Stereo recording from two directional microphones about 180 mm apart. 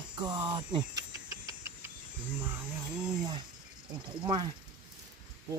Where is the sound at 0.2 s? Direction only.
25° right (ahead or behind).